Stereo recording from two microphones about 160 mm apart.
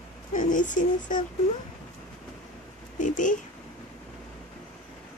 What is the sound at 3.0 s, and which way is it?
Speech, 50° left (ahead or behind).